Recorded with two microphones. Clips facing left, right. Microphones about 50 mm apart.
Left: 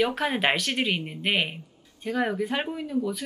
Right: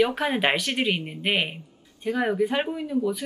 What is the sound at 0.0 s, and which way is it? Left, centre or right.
A woman's voice, centre.